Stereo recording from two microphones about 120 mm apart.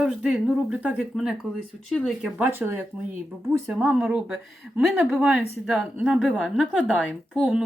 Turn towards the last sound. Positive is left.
turn(degrees=-5)  # may be behind; listen again after turning